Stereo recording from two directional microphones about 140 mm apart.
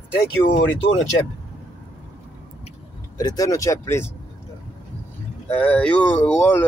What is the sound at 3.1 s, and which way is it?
Speech, 25° left (ahead or behind).